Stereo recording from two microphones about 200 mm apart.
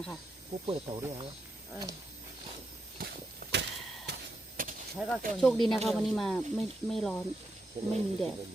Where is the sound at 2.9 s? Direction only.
50° right (ahead or behind).